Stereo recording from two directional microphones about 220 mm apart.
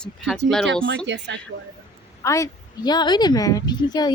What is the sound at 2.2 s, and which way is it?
A woman's voice, 15° left (ahead or behind).